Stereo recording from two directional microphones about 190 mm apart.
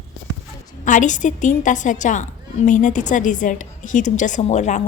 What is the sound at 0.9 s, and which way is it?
A woman's voice, 40° left (ahead or behind).